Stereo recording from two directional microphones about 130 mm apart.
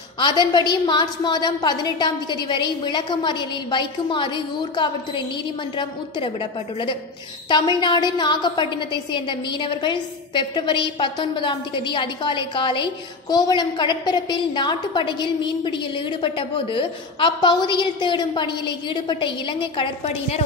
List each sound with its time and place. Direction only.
0.2 s a woman's voice: 35° left (ahead or behind)
7.4 s a woman's voice: 35° left (ahead or behind)
20.1 s a woman's voice: 55° left (ahead or behind)